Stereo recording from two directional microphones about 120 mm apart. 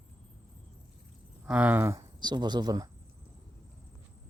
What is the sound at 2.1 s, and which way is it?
Speech, 35° right (ahead or behind).